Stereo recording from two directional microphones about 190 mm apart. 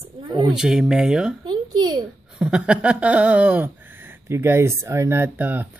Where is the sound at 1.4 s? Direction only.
20° right (ahead or behind).